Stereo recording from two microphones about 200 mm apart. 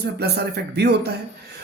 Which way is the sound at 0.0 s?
55° right (ahead or behind).